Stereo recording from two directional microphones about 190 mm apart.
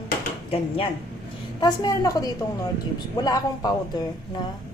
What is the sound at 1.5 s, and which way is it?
Speech, 20° left (ahead or behind).